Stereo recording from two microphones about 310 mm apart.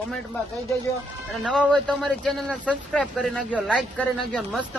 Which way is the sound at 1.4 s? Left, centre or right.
Centre.